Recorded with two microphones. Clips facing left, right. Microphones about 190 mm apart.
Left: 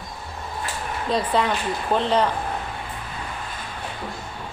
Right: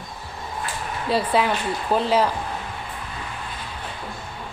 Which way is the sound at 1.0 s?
5° right (ahead or behind).